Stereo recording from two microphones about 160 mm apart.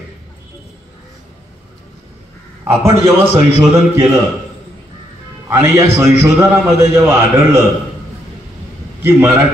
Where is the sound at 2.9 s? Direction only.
45° left (ahead or behind).